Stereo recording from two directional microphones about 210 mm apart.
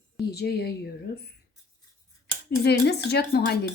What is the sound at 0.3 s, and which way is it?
Speech, 50° left (ahead or behind).